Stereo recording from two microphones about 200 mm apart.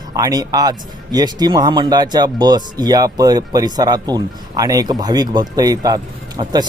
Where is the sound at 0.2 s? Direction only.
20° right (ahead or behind).